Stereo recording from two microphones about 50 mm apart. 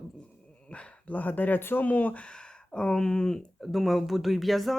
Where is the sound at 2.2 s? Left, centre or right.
Centre.